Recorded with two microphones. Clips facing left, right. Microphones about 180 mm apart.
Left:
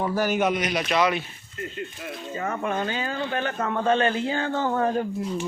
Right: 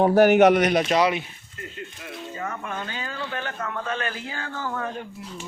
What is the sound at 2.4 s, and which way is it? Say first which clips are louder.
Speech: left 4 dB; 35° left (ahead or behind).